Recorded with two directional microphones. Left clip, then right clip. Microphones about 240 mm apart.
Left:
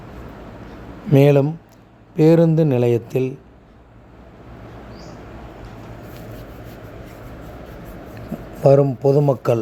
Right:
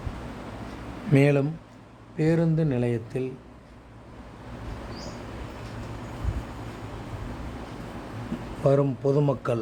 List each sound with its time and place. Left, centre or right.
1.1 s speech: centre
8.6 s speech: centre